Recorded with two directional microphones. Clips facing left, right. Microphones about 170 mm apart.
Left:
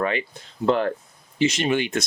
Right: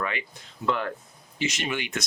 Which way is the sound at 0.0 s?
35° left (ahead or behind).